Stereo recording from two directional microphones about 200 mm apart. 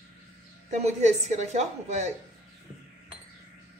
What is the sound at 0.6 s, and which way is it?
A woman's voice, 35° right (ahead or behind).